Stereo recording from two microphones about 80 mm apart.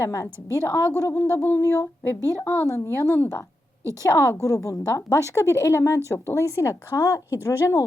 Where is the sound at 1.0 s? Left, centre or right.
Left.